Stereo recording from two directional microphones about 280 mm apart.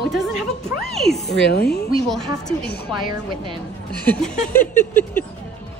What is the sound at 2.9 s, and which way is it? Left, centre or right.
Speech, centre.